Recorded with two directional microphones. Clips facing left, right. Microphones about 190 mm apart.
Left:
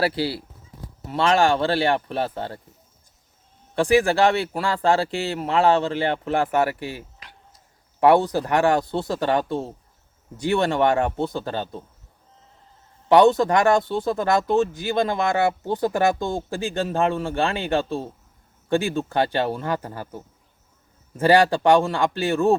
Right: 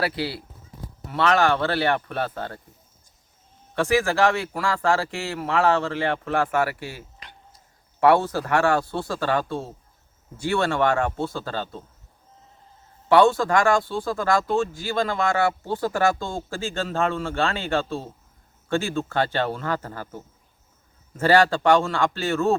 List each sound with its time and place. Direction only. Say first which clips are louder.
0.0 s a man's voice: left 3 dB; 30° left (ahead or behind)
3.8 s speech: left 3 dB; 35° left (ahead or behind)
4.9 s a man's voice: left 5 dB; 20° left (ahead or behind)
7.2 s a sound: right 1 dB; 5° left (ahead or behind)
8.0 s a man's voice: left 2 dB; 15° left (ahead or behind)
13.1 s a man's voice: left 2 dB; 20° left (ahead or behind)
21.2 s speech: left 1 dB; 15° left (ahead or behind)